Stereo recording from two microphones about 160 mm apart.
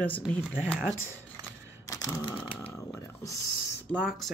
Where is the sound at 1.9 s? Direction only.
25° left (ahead or behind).